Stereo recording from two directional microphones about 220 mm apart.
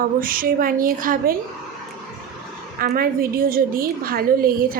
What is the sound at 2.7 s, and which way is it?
A woman's voice, 40° right (ahead or behind).